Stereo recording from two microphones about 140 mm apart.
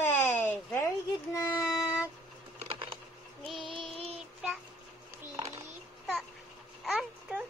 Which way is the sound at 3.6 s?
35° right (ahead or behind).